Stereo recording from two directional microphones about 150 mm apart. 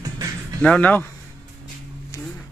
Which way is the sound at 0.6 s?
10° left (ahead or behind).